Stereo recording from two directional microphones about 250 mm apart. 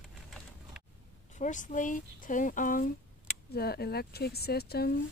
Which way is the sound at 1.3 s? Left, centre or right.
Left.